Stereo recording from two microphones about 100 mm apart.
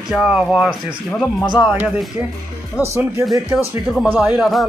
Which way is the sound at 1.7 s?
10° right (ahead or behind).